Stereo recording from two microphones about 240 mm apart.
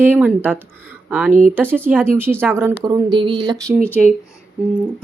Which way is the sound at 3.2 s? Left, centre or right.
Right.